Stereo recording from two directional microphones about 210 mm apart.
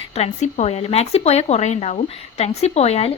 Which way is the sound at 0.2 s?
30° left (ahead or behind).